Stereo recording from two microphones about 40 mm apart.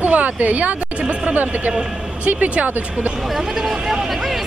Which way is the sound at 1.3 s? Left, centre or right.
Right.